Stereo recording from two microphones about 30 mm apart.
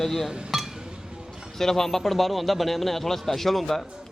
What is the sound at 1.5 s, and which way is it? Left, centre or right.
A man's voice, centre.